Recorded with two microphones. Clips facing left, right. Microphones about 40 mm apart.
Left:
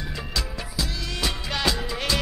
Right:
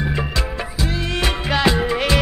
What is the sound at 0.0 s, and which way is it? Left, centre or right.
Music, right.